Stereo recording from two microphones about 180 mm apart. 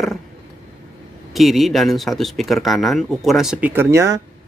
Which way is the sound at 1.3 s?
Centre (ahead or behind).